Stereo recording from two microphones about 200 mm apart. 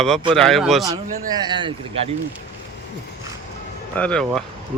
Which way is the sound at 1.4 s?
25° right (ahead or behind).